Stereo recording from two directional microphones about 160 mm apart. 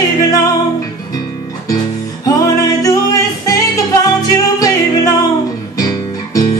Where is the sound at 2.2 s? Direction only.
20° left (ahead or behind).